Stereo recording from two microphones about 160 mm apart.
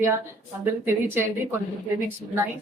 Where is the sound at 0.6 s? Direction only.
15° right (ahead or behind).